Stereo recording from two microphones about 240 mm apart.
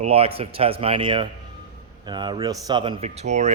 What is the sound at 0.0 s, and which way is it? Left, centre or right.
Speech, right.